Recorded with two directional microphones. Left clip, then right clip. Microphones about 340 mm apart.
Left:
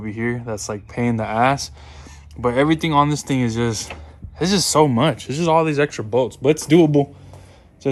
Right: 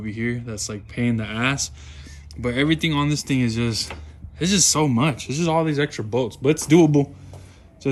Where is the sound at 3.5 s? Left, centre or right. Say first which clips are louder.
Left 2 dB; centre.